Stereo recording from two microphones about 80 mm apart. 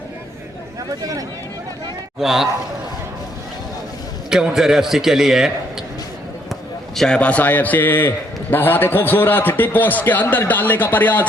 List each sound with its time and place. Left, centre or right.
0.9 s speech: right
2.1 s a man's voice: centre
4.3 s a man's voice: centre
6.5 s basketball bounce: centre
7.2 s a man's voice: centre